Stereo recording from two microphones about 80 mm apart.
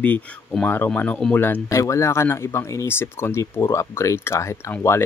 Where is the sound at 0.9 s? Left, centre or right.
Centre.